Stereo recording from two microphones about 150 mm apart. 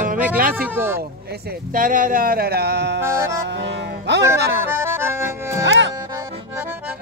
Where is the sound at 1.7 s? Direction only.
65° right (ahead or behind); by 2.8 s 90° right.